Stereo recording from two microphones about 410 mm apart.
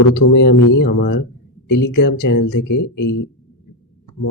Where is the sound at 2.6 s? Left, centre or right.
Left.